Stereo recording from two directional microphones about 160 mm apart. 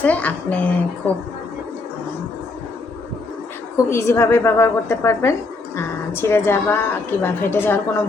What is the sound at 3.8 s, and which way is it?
A woman's voice, 15° left (ahead or behind).